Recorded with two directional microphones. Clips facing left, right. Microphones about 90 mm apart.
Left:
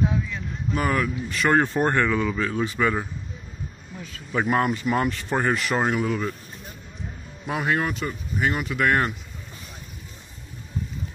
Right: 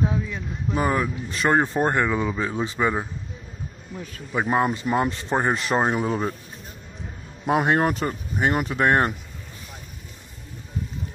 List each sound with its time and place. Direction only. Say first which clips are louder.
0.1 s speech: even; 25° right (ahead or behind)
4.5 s speech: right 1 dB; 25° right (ahead or behind)
7.4 s speech: right 5 dB; 35° right (ahead or behind)